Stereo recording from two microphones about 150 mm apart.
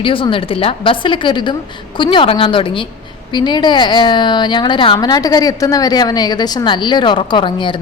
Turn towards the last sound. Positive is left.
turn(degrees=30)  # may be behind; listen again after turning